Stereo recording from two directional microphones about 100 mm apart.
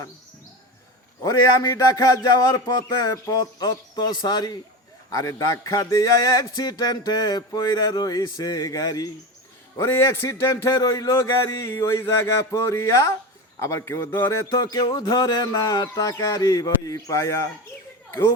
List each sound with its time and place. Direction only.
1.2 s speech: 35° left (ahead or behind)
14.6 s speech: 40° left (ahead or behind)